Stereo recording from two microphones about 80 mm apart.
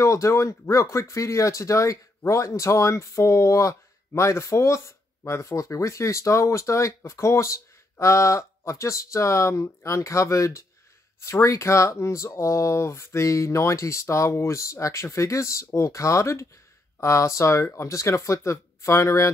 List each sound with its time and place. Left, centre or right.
0.0 s speech: left